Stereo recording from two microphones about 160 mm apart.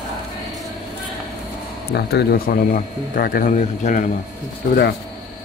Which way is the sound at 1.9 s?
80° left.